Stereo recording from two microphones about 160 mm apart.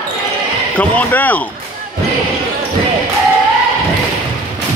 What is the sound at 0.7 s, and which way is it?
Speech, 10° left (ahead or behind).